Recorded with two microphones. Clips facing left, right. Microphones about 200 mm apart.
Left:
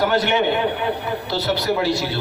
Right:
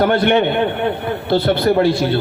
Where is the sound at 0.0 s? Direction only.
55° right (ahead or behind).